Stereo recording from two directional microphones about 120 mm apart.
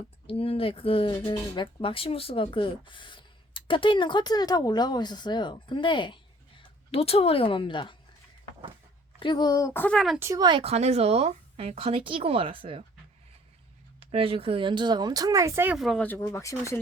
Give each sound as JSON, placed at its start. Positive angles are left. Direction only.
{"t": 0.3, "sound": "speech", "side_deg": 50}
{"t": 6.9, "sound": "speech", "side_deg": 55}
{"t": 9.2, "sound": "speech", "side_deg": 35}
{"t": 9.8, "sound": "speech", "side_deg": 5}
{"t": 10.2, "sound": "speech", "side_deg": -25}
{"t": 10.6, "sound": "speech", "side_deg": -60}
{"t": 14.0, "sound": "speech", "side_deg": -50}
{"t": 15.7, "sound": "speech", "side_deg": 0}
{"t": 16.0, "sound": "speech", "side_deg": 15}